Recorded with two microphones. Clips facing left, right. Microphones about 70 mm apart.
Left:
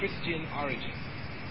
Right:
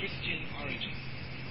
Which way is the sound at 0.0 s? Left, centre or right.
Left.